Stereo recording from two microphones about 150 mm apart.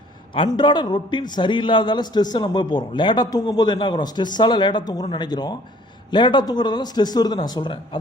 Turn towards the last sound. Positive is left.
turn(degrees=30)  # may be behind; listen again after turning